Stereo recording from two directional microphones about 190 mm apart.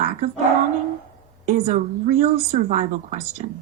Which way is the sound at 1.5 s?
40° right (ahead or behind).